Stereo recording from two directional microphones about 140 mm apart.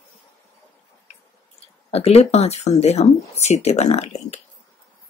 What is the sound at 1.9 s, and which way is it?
Speech, 50° left (ahead or behind).